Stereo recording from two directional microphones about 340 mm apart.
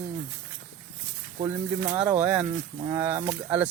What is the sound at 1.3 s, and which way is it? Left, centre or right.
Speech, centre.